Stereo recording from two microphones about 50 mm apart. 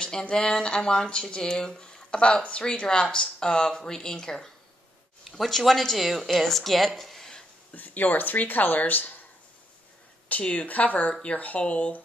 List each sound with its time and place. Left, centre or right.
0.0 s speech: centre
2.0 s a sound: left
2.4 s speech: left; by 6.9 s centre
7.0 s a sound: centre
7.7 s speech: left
10.2 s speech: left